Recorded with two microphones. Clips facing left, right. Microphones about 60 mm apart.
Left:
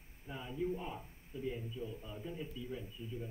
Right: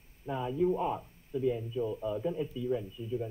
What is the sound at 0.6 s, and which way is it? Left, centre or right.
A man's voice, right.